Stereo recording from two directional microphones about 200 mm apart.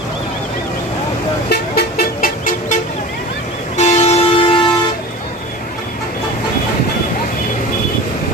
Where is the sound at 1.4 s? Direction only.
50° left (ahead or behind); by 4.5 s 30° left (ahead or behind).